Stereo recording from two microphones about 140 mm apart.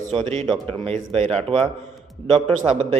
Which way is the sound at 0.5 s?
40° right (ahead or behind).